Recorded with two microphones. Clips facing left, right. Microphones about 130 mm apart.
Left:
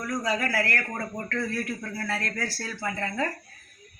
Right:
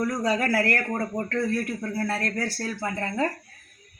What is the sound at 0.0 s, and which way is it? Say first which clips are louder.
Speech: right 4 dB; 30° right (ahead or behind).